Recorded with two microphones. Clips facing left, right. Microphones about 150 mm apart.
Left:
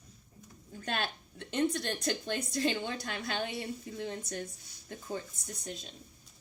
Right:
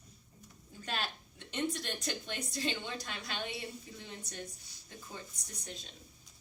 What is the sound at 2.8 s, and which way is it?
Speech, 55° left (ahead or behind).